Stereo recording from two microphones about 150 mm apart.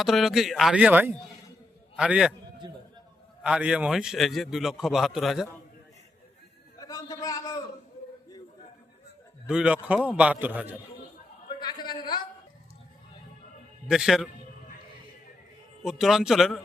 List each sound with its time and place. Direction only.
0.0 s a man's voice: centre (ahead or behind)
3.4 s a man's voice: 5° right (ahead or behind)
6.7 s a sound: 25° left (ahead or behind)
9.5 s a man's voice: 5° right (ahead or behind)
11.4 s a sound: 30° left (ahead or behind)
13.8 s a man's voice: 5° right (ahead or behind)
15.8 s a man's voice: centre (ahead or behind)